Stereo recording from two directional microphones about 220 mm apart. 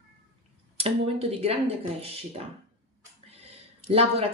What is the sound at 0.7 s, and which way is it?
Speech, 25° right (ahead or behind).